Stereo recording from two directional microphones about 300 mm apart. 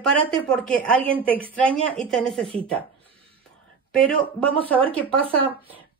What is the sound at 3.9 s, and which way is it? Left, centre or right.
Speech, centre.